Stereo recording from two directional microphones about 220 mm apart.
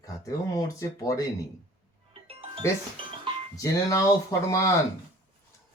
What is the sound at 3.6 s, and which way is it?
Speech, 15° left (ahead or behind).